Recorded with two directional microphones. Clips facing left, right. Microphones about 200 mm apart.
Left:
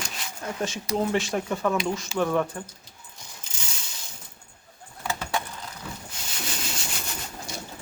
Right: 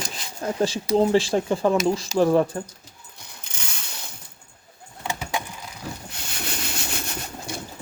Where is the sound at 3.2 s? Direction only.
65° right (ahead or behind).